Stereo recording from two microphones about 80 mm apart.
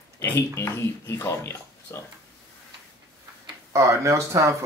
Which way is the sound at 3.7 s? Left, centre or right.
Right.